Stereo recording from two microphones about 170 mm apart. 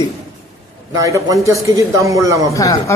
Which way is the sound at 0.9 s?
20° right (ahead or behind).